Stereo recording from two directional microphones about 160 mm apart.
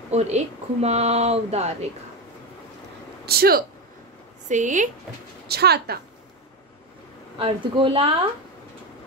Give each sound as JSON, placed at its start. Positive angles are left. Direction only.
{"t": 0.1, "sound": "speech", "side_deg": -45}
{"t": 3.3, "sound": "speech", "side_deg": -75}
{"t": 4.5, "sound": "speech", "side_deg": -50}
{"t": 5.5, "sound": "speech", "side_deg": -85}
{"t": 7.3, "sound": "speech", "side_deg": -35}